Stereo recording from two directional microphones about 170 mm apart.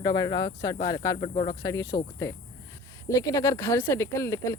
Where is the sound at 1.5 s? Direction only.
20° left (ahead or behind).